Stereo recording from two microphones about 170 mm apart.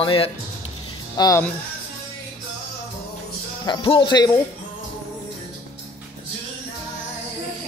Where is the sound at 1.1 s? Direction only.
20° left (ahead or behind).